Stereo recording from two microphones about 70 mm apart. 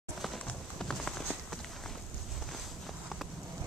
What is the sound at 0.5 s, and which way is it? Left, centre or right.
Clip-clop, centre.